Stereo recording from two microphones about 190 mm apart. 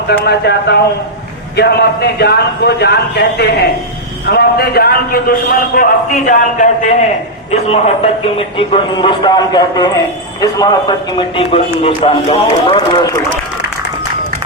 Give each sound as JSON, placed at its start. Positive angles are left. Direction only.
{"t": 0.1, "sound": "a man's voice", "side_deg": 60}
{"t": 8.4, "sound": "a man's voice", "side_deg": 25}